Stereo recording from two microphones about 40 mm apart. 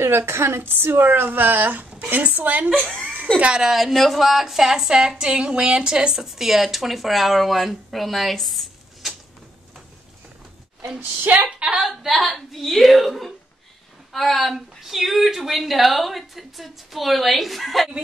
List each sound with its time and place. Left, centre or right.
0.0 s a woman's voice: right
3.3 s a woman's voice: right
3.6 s speech: centre
5.1 s a woman's voice: right
6.2 s speech: centre
11.4 s speech: right
12.0 s speech: centre